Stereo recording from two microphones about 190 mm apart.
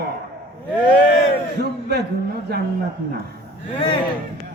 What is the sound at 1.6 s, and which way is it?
Speech, 60° right (ahead or behind).